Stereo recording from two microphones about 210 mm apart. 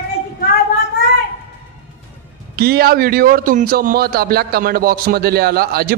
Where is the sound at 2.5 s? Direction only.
45° right (ahead or behind).